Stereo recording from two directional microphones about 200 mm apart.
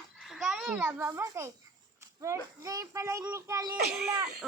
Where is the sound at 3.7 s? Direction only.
50° right (ahead or behind).